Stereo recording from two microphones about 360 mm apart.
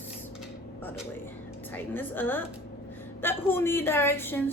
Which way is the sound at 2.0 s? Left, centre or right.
Centre.